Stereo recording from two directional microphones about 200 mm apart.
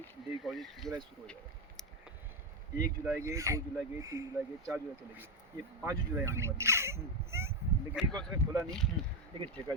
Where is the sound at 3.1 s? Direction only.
15° right (ahead or behind).